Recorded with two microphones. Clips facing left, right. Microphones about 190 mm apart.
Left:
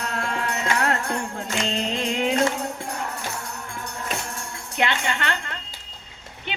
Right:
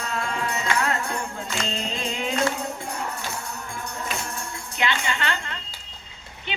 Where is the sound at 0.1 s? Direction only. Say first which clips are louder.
Right 2 dB; 65° left (ahead or behind).